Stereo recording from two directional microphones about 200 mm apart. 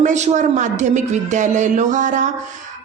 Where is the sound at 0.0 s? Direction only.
35° right (ahead or behind).